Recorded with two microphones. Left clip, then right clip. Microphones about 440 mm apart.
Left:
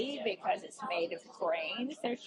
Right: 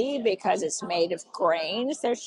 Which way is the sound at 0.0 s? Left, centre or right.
Right.